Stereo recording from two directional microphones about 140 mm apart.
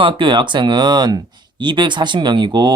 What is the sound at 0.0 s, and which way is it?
Speech, 35° right (ahead or behind).